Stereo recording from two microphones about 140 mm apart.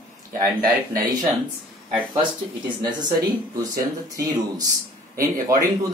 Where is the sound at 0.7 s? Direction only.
25° right (ahead or behind).